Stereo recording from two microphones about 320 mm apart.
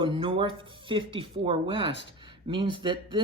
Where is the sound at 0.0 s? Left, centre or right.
Centre.